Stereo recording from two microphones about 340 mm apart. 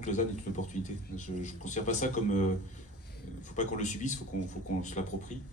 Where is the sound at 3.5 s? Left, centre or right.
Left.